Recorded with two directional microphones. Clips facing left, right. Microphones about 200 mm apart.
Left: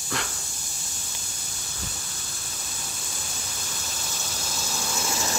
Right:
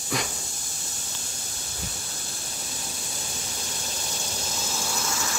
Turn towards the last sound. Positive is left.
turn(degrees=20)  # may be behind; listen again after turning